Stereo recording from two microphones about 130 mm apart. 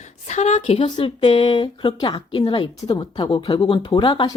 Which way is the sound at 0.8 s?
40° left (ahead or behind).